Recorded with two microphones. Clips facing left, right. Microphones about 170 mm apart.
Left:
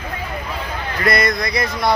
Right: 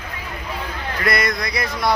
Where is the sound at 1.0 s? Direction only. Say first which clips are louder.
Left 3 dB; 5° right (ahead or behind).